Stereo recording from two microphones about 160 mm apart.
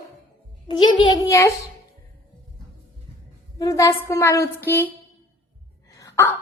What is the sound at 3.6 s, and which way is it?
Speech, 20° left (ahead or behind).